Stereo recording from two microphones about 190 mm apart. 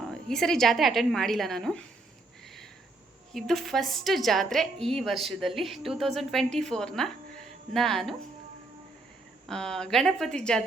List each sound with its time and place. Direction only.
0.0 s a woman's voice: centre (ahead or behind)
3.3 s a woman's voice: centre (ahead or behind)
9.5 s a woman's voice: 5° left (ahead or behind)